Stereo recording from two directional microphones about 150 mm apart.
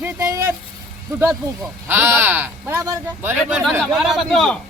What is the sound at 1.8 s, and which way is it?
Speech, 15° right (ahead or behind).